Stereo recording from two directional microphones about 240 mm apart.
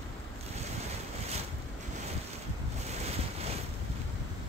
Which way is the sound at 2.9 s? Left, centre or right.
Right.